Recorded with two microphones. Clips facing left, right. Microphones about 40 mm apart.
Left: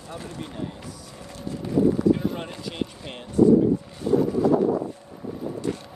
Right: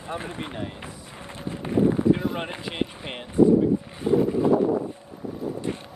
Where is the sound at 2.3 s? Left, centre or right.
Right.